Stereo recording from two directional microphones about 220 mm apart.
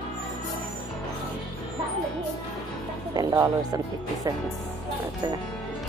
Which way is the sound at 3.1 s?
15° right (ahead or behind).